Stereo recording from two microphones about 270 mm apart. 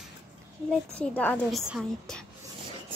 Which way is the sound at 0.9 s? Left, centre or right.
Centre.